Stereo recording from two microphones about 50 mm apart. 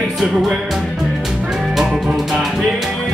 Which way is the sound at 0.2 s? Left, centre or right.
Centre.